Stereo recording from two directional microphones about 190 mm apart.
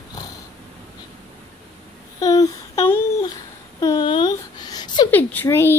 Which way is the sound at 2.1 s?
20° left (ahead or behind).